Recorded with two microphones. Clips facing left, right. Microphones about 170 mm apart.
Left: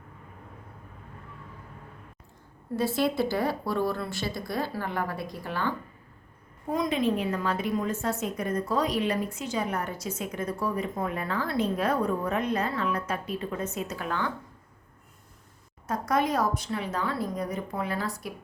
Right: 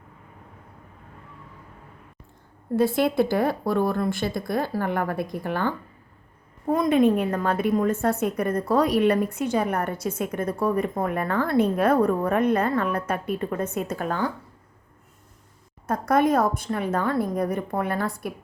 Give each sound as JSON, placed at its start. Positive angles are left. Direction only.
{"t": 2.7, "sound": "a woman's voice", "side_deg": -55}
{"t": 15.9, "sound": "speech", "side_deg": -55}